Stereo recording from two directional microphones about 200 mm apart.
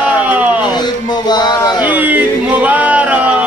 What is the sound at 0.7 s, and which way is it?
Music, 20° left (ahead or behind).